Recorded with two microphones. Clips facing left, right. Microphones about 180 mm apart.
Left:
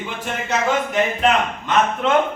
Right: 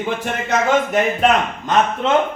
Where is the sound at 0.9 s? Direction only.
45° right (ahead or behind).